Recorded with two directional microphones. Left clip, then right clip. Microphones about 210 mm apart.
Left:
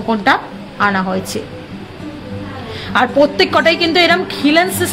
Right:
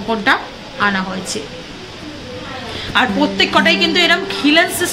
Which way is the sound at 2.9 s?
55° left (ahead or behind).